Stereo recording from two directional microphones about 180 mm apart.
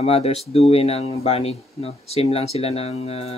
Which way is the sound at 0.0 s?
35° left (ahead or behind).